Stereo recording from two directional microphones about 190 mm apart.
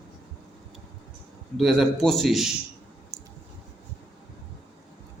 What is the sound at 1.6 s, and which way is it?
A man's voice, centre (ahead or behind).